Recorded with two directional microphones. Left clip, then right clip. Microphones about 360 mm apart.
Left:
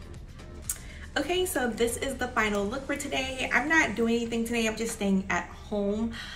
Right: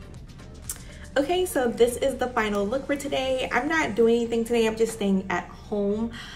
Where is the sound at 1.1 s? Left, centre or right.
Centre.